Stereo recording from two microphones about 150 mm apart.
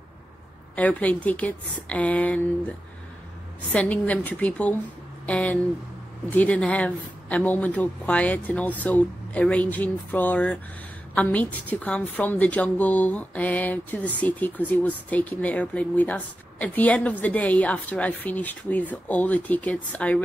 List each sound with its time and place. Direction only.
0.7 s a woman's voice: 10° left (ahead or behind)
3.7 s a woman's voice: 10° left (ahead or behind)